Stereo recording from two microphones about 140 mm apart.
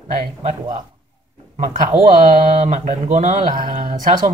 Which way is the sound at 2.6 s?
55° right (ahead or behind).